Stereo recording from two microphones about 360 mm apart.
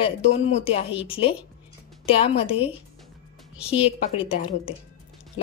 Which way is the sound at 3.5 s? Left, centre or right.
Centre.